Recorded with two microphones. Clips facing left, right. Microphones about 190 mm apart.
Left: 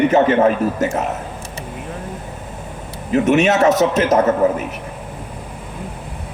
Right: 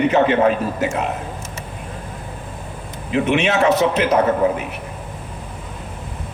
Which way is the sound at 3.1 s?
45° left (ahead or behind).